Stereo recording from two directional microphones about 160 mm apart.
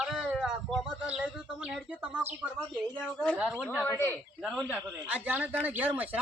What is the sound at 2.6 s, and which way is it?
Speech, 15° left (ahead or behind).